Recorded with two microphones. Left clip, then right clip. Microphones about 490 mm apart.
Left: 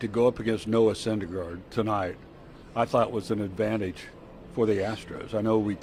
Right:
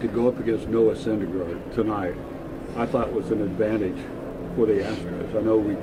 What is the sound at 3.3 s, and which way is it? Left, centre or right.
Speech, left.